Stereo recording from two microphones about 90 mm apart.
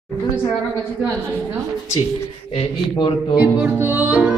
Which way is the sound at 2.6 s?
70° left (ahead or behind).